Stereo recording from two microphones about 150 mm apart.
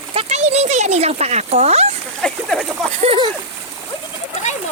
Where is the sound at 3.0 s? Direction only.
40° right (ahead or behind).